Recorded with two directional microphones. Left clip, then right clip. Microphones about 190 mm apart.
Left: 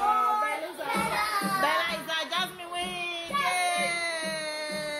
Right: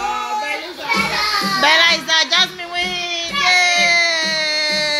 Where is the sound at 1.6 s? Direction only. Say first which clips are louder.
Right 14 dB; 35° right (ahead or behind).